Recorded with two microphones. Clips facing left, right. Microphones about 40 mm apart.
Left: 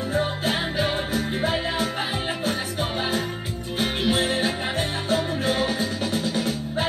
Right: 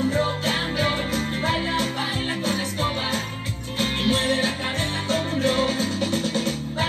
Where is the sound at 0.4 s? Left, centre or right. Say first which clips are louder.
Even; right.